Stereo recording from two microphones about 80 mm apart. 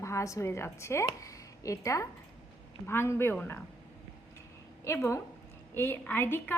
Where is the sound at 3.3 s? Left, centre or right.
Centre.